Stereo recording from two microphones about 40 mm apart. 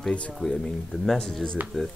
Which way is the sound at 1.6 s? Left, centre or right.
Right.